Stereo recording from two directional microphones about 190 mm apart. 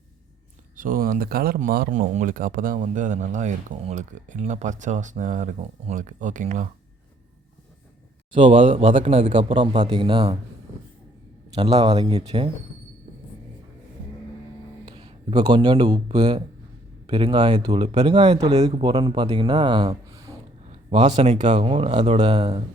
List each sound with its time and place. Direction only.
0.8 s speech: 45° right (ahead or behind)
8.3 s a man's voice: 25° right (ahead or behind)
8.5 s speech: 40° right (ahead or behind)
11.5 s speech: 25° right (ahead or behind)
14.8 s speech: 25° right (ahead or behind)
21.2 s speech: 35° right (ahead or behind)